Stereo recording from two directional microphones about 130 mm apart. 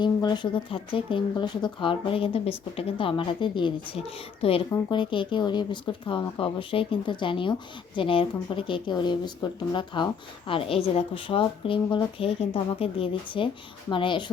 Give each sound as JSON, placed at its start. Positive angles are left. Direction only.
{"t": 0.0, "sound": "speech", "side_deg": 35}